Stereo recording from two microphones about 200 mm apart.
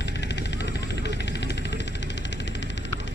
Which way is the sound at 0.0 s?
60° left (ahead or behind).